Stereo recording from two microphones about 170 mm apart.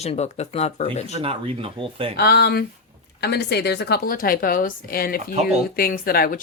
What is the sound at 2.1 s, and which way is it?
A woman's voice, 70° left (ahead or behind).